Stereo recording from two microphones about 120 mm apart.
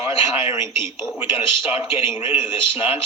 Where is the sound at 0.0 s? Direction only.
20° right (ahead or behind).